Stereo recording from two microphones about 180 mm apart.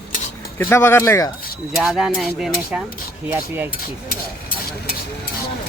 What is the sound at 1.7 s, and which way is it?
Speech, centre (ahead or behind).